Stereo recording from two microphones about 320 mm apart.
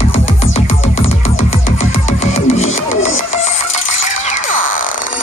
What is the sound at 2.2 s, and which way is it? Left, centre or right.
Music, left.